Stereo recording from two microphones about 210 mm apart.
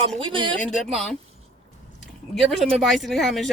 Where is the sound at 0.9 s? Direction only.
Centre (ahead or behind).